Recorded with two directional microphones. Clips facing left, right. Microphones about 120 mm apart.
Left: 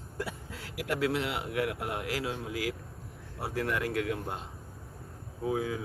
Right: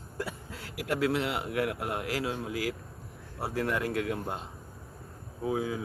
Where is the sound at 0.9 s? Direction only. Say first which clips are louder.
Right 2 dB; 40° right (ahead or behind).